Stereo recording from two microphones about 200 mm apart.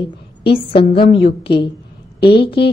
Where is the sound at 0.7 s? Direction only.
25° left (ahead or behind).